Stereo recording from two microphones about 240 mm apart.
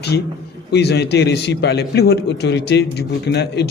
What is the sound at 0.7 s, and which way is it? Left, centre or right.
A man's voice, left.